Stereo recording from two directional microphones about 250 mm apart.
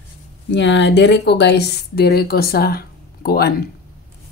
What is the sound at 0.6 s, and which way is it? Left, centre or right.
Speech, left.